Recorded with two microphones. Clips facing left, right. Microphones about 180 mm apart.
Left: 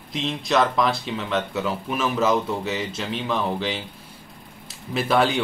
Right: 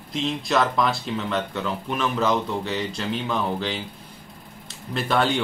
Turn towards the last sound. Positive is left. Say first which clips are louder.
# left 2 dB
turn(degrees=5)  # may be behind; listen again after turning